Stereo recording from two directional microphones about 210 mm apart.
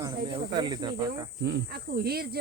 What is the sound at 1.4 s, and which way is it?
Speech, 50° right (ahead or behind).